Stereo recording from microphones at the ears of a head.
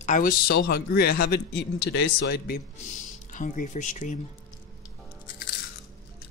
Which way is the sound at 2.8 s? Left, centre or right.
Left.